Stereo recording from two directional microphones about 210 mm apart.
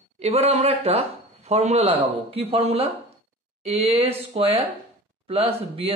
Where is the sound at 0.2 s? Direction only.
30° right (ahead or behind).